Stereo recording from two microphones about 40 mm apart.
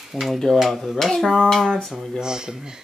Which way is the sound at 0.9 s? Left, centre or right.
Centre.